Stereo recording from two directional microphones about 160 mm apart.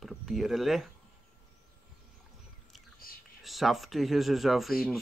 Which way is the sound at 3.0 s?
65° left (ahead or behind).